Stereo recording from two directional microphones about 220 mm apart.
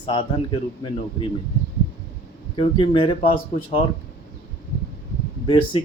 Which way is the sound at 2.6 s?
25° left (ahead or behind).